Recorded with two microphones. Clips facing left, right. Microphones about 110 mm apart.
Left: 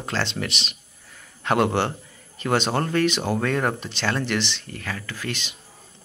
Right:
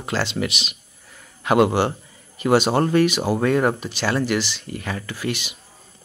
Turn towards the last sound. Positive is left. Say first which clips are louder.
# right 5 dB
turn(degrees=-10)  # may be behind; listen again after turning